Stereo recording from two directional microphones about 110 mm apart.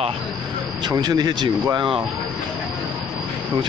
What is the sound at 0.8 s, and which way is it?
Speech, 40° right (ahead or behind).